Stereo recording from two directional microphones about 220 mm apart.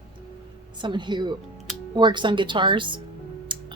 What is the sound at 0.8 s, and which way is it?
Speech, 20° right (ahead or behind).